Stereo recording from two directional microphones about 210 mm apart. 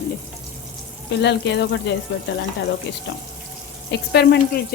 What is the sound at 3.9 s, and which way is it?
Speech, 55° left (ahead or behind).